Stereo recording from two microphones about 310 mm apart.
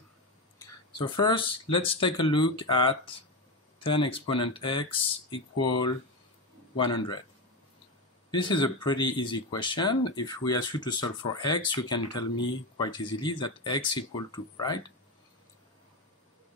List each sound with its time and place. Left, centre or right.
0.6 s speech: centre
8.3 s speech: centre